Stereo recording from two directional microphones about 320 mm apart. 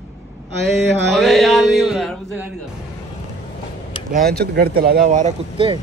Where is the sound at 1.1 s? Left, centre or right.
Centre.